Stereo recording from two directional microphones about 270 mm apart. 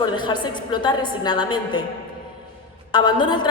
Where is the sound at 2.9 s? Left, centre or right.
Centre.